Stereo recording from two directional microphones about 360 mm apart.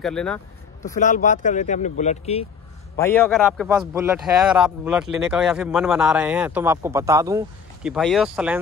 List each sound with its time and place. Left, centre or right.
0.0 s a man's voice: centre
0.8 s speech: left
3.0 s a man's voice: centre